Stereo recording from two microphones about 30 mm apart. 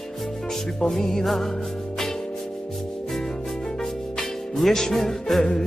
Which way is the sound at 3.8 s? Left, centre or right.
Centre.